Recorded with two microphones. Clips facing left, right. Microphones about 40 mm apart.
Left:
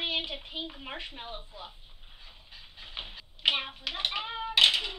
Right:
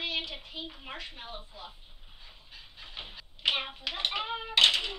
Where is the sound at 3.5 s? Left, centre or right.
Centre.